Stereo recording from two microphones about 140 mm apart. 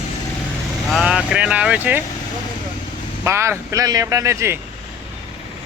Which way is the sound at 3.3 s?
20° right (ahead or behind).